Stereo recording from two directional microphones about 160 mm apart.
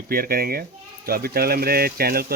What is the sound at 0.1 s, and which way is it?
Speech, 70° right (ahead or behind).